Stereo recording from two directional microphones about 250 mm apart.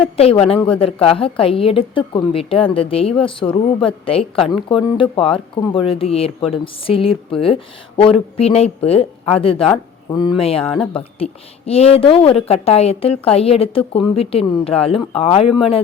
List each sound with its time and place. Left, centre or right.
0.0 s a woman's voice: left